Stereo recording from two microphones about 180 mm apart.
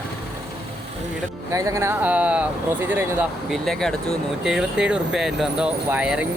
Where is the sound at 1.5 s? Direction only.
15° right (ahead or behind).